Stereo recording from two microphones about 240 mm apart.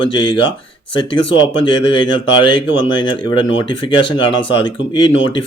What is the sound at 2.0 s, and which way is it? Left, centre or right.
Speech, centre.